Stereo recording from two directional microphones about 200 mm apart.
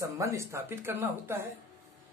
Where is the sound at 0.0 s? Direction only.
15° right (ahead or behind).